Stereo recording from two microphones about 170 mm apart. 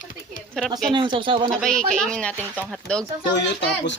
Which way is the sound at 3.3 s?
90° left.